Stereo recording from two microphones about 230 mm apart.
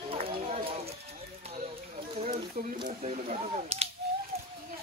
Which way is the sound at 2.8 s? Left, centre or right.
Right.